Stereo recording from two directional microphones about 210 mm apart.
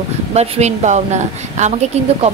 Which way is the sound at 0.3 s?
30° right (ahead or behind).